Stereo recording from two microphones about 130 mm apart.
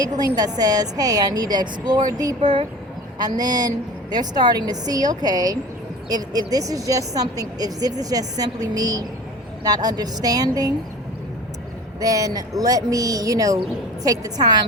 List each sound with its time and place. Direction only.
0.0 s a woman's voice: 30° right (ahead or behind)
11.9 s a woman's voice: 30° right (ahead or behind)